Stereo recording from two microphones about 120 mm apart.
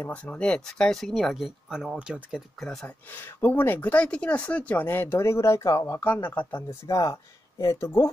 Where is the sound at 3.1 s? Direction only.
20° left (ahead or behind).